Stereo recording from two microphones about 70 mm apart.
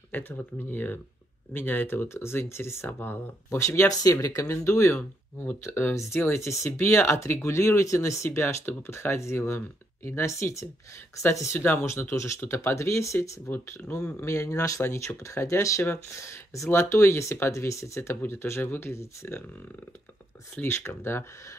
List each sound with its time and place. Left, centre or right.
0.1 s speech: left
3.4 s speech: left
5.7 s speech: left
11.6 s speech: left
13.8 s speech: left
14.2 s speech: left
20.5 s speech: left